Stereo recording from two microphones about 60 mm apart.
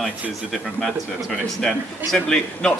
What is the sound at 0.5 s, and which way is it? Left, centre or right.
Speech, centre.